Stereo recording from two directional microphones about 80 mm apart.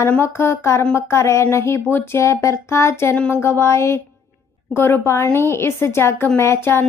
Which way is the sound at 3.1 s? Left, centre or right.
Centre.